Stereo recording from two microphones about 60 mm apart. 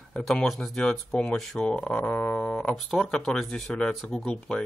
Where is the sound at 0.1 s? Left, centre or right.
Centre.